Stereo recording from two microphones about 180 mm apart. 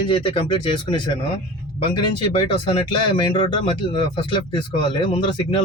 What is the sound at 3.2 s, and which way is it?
Speech, 25° left (ahead or behind).